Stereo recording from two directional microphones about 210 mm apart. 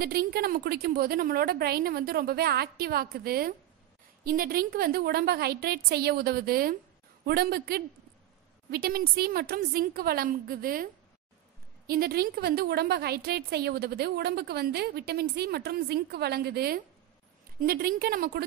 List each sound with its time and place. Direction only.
0.0 s a woman's voice: 45° right (ahead or behind)
11.9 s a woman's voice: 45° right (ahead or behind)